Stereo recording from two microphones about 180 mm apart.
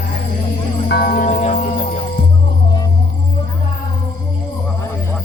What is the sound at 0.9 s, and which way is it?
Music, 60° left (ahead or behind).